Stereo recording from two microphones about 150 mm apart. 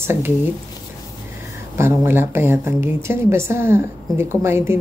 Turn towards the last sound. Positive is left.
turn(degrees=-15)  # may be behind; listen again after turning